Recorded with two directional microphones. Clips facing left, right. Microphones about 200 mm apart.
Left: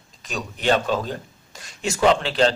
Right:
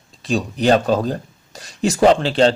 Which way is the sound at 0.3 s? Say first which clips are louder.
Right 6 dB; 35° right (ahead or behind).